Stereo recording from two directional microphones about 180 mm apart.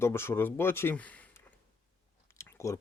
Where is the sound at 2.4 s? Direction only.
15° left (ahead or behind).